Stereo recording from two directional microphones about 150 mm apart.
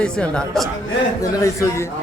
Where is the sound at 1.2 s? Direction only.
25° left (ahead or behind).